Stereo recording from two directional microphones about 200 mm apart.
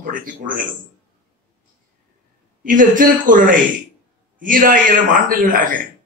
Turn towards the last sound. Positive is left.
turn(degrees=-40)  # may be behind; listen again after turning